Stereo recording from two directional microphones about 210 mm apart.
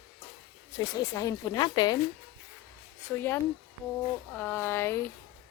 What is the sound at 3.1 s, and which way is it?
Speech, 10° left (ahead or behind).